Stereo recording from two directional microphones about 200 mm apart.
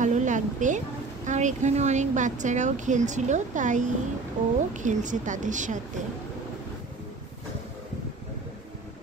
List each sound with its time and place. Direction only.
0.0 s speech: 40° right (ahead or behind)